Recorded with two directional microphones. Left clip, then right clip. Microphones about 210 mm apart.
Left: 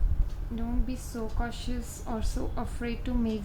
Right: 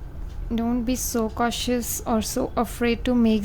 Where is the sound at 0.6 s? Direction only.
55° right (ahead or behind).